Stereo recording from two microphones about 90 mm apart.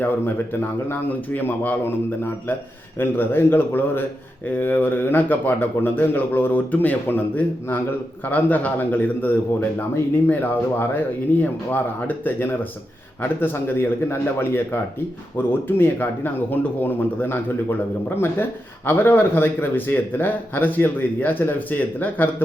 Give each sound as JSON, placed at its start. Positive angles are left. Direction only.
{"t": 0.0, "sound": "speech", "side_deg": 25}
{"t": 18.9, "sound": "speech", "side_deg": 25}